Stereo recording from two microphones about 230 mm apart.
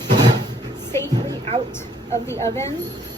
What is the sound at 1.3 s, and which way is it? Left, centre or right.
Music, right.